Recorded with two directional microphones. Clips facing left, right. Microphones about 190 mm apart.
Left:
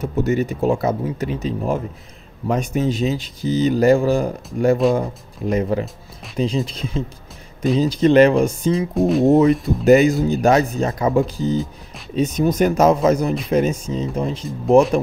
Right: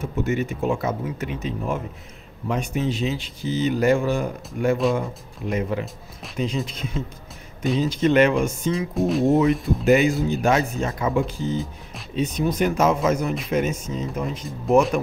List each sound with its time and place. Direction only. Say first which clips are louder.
0.0 s speech: left 5 dB; 35° left (ahead or behind)
4.8 s speech: left 4 dB; centre (ahead or behind)
5.5 s speech: left 5 dB; 35° left (ahead or behind)
8.9 s speech: left 4 dB; centre (ahead or behind)
9.3 s speech: left 5 dB; 35° left (ahead or behind)